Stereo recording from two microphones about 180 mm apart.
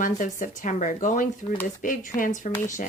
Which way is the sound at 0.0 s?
45° left (ahead or behind).